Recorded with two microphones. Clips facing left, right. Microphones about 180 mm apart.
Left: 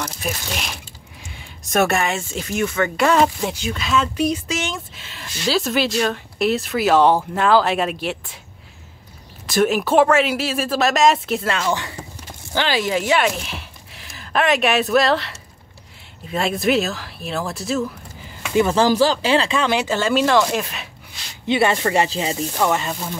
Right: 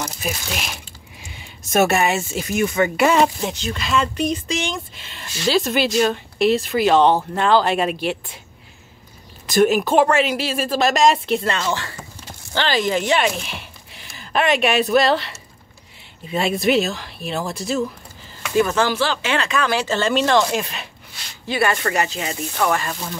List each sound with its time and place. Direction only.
0.0 s speech: 5° right (ahead or behind)
3.3 s speech: 10° left (ahead or behind)
9.5 s speech: centre (ahead or behind)
18.5 s speech: 20° left (ahead or behind)
18.8 s speech: 40° left (ahead or behind); by 20.9 s centre (ahead or behind)
21.5 s speech: 25° left (ahead or behind)